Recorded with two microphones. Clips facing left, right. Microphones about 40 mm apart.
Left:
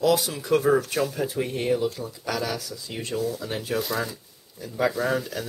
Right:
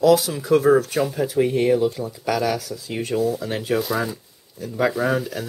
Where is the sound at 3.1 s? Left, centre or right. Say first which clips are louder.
Right 6 dB; right.